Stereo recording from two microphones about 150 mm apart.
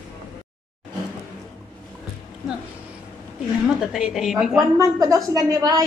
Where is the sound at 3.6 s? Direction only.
5° right (ahead or behind).